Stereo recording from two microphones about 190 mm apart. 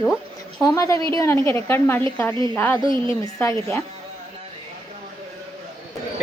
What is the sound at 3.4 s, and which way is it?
Speech, 15° left (ahead or behind).